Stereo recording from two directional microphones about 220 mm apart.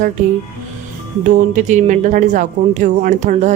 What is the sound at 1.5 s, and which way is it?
Speech, 35° right (ahead or behind).